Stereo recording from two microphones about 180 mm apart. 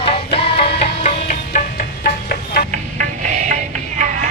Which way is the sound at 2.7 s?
45° right (ahead or behind).